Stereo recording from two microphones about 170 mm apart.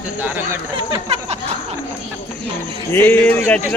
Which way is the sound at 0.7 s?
35° right (ahead or behind).